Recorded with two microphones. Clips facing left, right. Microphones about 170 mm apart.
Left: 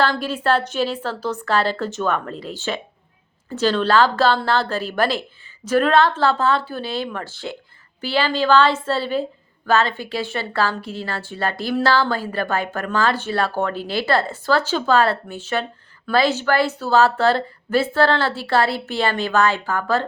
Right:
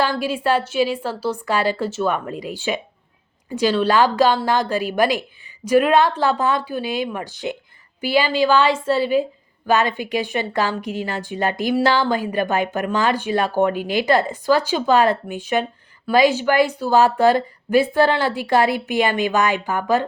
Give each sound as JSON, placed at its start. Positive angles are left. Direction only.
{"t": 0.0, "sound": "a woman's voice", "side_deg": -10}